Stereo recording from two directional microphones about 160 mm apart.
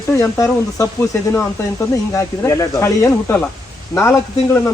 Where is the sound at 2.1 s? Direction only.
15° left (ahead or behind).